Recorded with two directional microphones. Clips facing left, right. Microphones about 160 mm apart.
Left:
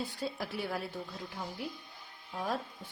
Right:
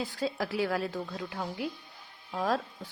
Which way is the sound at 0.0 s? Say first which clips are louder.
Right 5 dB; 90° right.